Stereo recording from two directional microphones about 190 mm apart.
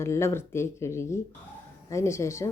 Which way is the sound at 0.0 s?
15° left (ahead or behind).